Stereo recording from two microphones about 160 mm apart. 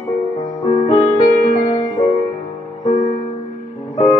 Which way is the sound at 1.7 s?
25° left (ahead or behind).